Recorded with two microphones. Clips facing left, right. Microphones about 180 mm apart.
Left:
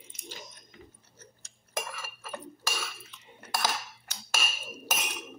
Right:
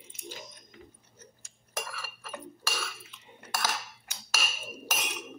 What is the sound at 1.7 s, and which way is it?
Chink, 15° left (ahead or behind).